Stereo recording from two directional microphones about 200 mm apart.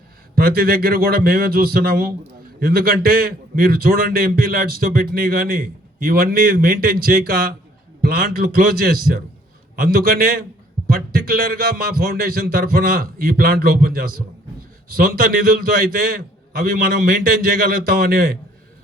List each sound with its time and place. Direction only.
0.3 s a man's voice: 50° right (ahead or behind)